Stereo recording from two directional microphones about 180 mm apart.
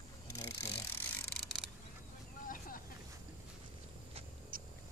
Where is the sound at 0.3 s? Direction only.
15° left (ahead or behind).